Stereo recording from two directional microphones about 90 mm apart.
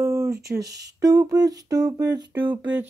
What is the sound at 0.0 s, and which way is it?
Speech, 35° right (ahead or behind).